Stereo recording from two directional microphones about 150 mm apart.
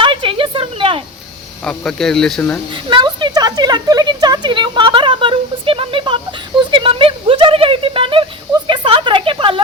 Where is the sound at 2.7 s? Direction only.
30° right (ahead or behind).